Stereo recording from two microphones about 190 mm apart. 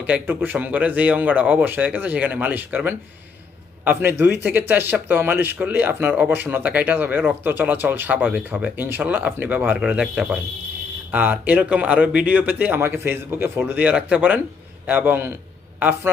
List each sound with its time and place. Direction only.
0.0 s speech: 10° right (ahead or behind)